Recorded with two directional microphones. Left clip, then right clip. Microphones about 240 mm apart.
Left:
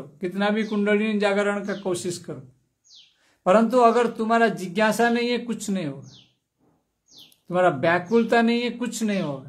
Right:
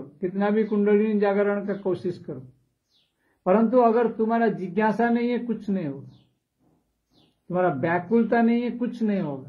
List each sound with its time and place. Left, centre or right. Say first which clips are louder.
0.2 s a man's voice: even; left
3.4 s a man's voice: left 2 dB; left
7.4 s a man's voice: left 4 dB; left